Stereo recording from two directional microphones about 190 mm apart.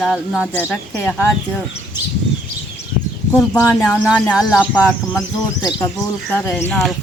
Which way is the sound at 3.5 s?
10° left (ahead or behind).